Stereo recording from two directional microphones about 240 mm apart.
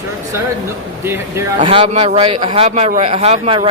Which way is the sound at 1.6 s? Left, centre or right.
Right.